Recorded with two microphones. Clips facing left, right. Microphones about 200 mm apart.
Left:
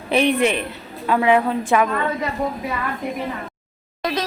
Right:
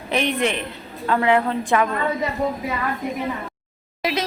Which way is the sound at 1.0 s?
15° left (ahead or behind).